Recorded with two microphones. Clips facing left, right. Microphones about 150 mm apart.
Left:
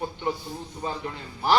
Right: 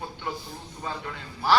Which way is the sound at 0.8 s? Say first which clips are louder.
Left 2 dB; 25° left (ahead or behind).